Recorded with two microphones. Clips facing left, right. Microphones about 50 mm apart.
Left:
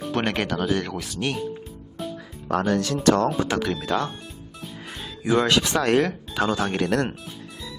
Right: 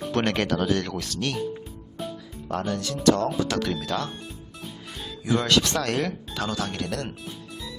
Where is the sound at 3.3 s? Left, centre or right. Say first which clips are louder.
Left 2 dB; left.